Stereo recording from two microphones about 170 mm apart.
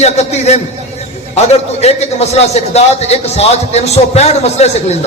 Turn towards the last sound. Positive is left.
turn(degrees=40)  # may be behind; listen again after turning